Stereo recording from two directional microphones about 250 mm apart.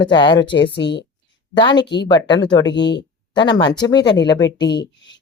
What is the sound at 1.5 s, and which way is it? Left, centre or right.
Speech, centre.